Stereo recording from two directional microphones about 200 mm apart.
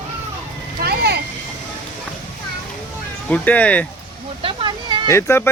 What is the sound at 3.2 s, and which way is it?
Speech, 5° left (ahead or behind).